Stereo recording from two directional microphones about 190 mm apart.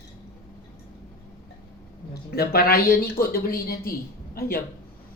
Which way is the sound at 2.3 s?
55° left (ahead or behind).